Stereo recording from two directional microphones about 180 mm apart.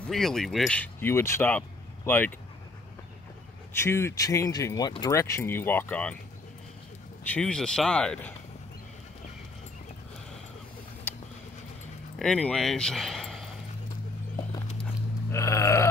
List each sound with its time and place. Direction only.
0.1 s speech: centre (ahead or behind)
3.7 s speech: 15° left (ahead or behind)
7.2 s speech: 5° left (ahead or behind)
12.2 s speech: 5° left (ahead or behind)
15.3 s burping: 15° left (ahead or behind)